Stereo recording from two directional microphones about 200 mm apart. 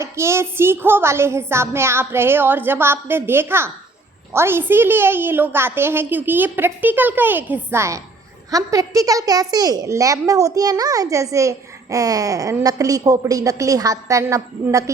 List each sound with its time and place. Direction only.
0.0 s a woman's voice: 15° right (ahead or behind)